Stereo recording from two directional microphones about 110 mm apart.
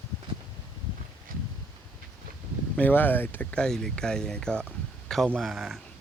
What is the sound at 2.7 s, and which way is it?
Speech, 15° left (ahead or behind).